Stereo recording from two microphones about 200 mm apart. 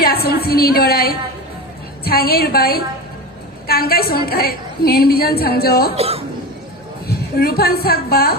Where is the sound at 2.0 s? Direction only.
50° left (ahead or behind).